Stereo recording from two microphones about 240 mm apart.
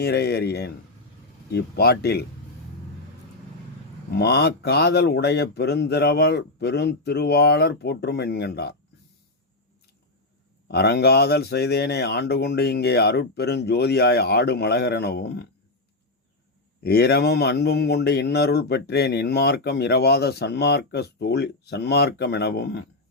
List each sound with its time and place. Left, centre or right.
0.0 s speech: left
4.1 s speech: left
10.7 s speech: left
16.8 s speech: left